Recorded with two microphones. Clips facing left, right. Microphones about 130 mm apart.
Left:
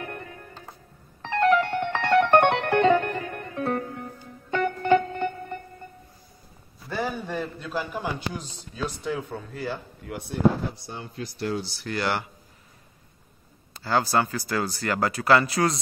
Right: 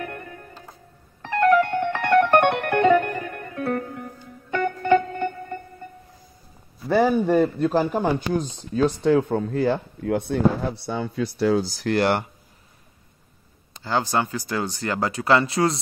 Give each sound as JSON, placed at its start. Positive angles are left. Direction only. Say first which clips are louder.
{"t": 1.3, "sound": "music", "louder": "right 3 dB", "side_deg": 20}
{"t": 4.8, "sound": "music", "louder": "right 2 dB", "side_deg": 25}
{"t": 6.9, "sound": "speech", "louder": "right 11 dB", "side_deg": -65}
{"t": 10.0, "sound": "speech", "louder": "right 3 dB", "side_deg": -65}
{"t": 11.7, "sound": "speech", "louder": "right 7 dB", "side_deg": -80}
{"t": 13.7, "sound": "speech", "louder": "even", "side_deg": -20}